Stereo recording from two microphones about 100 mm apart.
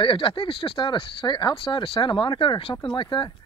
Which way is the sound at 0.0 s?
60° left (ahead or behind).